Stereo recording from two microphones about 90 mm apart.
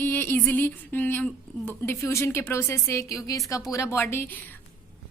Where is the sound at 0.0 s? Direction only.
25° left (ahead or behind).